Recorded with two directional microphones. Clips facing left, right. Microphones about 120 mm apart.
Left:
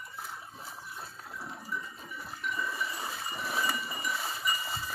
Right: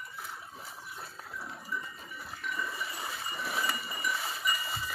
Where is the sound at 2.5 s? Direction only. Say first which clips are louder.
Left 2 dB; 20° left (ahead or behind).